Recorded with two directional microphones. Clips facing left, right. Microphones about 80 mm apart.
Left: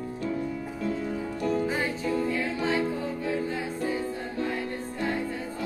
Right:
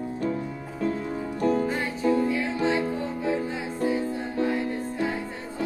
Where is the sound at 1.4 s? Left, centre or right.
Right.